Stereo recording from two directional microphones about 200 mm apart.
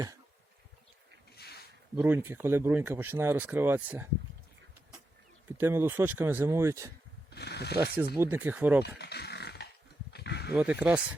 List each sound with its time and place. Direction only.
1.4 s a sound: 55° left (ahead or behind)
2.0 s speech: 10° right (ahead or behind)
5.5 s speech: 10° right (ahead or behind)
7.3 s speech: 55° left (ahead or behind)
8.1 s speech: 10° right (ahead or behind)
9.0 s a sound: 55° left (ahead or behind)
10.5 s speech: 10° right (ahead or behind)